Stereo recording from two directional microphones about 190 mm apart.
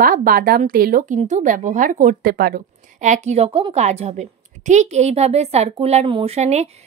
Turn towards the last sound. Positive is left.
turn(degrees=-35)  # may be behind; listen again after turning